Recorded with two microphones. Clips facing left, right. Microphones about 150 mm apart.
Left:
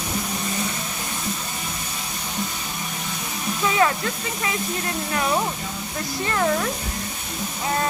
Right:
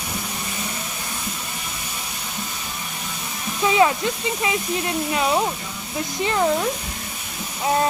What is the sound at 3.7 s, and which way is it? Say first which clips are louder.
Speech: right 4 dB; 15° right (ahead or behind).